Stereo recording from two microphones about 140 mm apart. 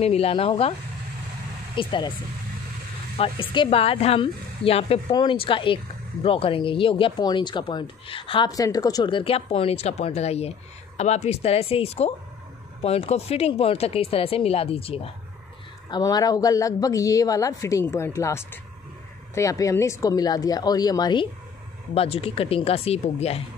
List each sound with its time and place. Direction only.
0.0 s speech: 45° left (ahead or behind)
1.8 s speech: 35° left (ahead or behind)
3.2 s speech: 40° left (ahead or behind)
8.5 s speech: 25° left (ahead or behind); by 15.0 s 40° left (ahead or behind)
15.9 s speech: 25° left (ahead or behind)
21.9 s speech: 45° left (ahead or behind)